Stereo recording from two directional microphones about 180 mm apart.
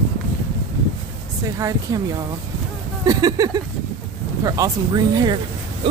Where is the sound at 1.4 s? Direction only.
20° right (ahead or behind).